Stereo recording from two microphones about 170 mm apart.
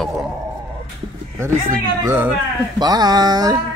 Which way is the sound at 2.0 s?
15° right (ahead or behind).